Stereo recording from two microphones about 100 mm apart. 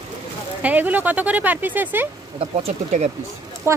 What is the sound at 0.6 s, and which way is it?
Speech, 15° right (ahead or behind).